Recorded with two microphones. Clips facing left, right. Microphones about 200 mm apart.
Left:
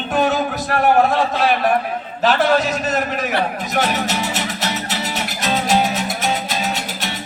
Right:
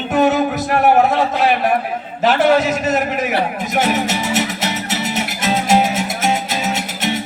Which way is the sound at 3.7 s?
25° right (ahead or behind).